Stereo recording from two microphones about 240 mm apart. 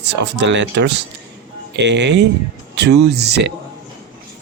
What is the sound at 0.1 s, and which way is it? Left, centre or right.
Speech, right.